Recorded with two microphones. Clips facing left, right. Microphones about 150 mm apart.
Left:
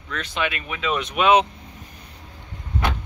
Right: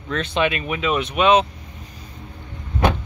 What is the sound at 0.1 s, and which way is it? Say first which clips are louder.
Speech: right 6 dB; 25° right (ahead or behind).